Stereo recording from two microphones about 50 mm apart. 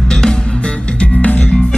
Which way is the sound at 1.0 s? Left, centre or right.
Left.